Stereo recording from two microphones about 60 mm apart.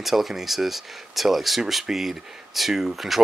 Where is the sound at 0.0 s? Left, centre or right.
Centre.